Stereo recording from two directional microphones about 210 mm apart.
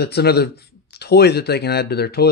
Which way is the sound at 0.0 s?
50° left (ahead or behind).